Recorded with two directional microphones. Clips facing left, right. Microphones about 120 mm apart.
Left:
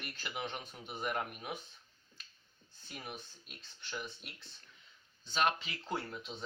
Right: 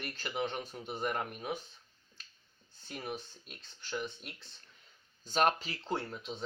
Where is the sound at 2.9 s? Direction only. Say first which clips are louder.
Right 6 dB; centre (ahead or behind).